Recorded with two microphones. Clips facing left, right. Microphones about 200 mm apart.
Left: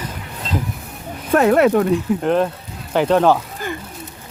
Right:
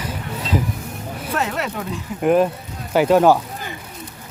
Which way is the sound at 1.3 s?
55° left (ahead or behind).